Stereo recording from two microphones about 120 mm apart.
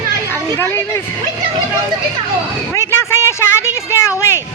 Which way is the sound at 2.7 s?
20° left (ahead or behind).